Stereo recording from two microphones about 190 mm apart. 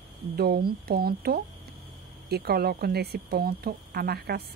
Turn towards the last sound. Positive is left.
turn(degrees=-55)  # may be behind; listen again after turning